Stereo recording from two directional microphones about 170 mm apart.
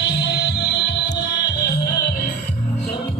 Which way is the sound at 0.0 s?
90° left.